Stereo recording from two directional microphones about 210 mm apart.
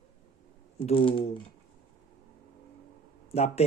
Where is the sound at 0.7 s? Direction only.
25° left (ahead or behind).